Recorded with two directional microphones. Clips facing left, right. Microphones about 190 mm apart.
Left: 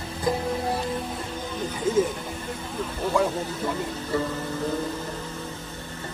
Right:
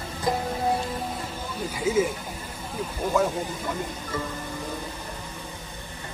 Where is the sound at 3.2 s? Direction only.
5° right (ahead or behind).